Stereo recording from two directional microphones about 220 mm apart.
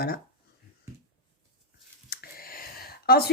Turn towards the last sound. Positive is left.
turn(degrees=45)  # may be behind; listen again after turning